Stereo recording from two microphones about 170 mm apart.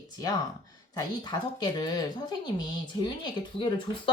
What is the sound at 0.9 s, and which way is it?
Speech, 25° left (ahead or behind).